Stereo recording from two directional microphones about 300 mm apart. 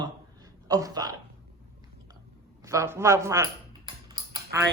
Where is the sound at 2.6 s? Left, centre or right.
Centre.